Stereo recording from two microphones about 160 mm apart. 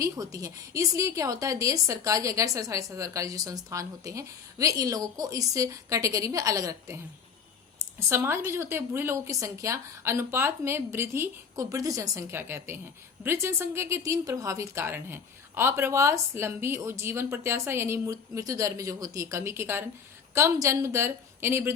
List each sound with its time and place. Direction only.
0.0 s a woman's voice: 20° right (ahead or behind)